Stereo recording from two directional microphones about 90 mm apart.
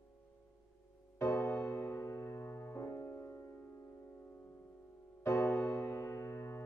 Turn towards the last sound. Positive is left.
turn(degrees=30)  # may be behind; listen again after turning